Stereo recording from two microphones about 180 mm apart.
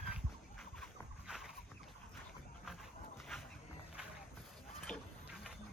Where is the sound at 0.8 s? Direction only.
Centre (ahead or behind).